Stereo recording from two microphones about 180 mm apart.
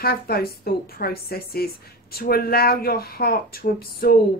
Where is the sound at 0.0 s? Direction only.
60° left (ahead or behind).